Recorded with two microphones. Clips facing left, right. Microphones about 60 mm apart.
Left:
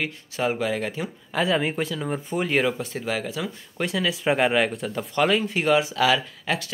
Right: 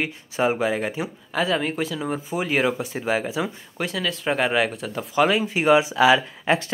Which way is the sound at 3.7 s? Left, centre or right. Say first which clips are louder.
Left 3 dB; centre.